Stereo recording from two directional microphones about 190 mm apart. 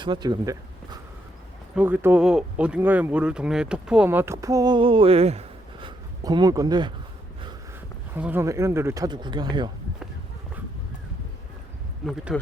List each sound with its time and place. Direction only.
0.0 s speech: 25° right (ahead or behind)
1.7 s speech: 10° right (ahead or behind); by 5.9 s 35° right (ahead or behind)
6.2 s speech: 20° right (ahead or behind)
8.1 s speech: 10° right (ahead or behind)
12.0 s speech: centre (ahead or behind)